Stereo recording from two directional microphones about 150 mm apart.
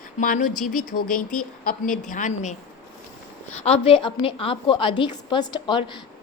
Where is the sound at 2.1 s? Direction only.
55° left (ahead or behind).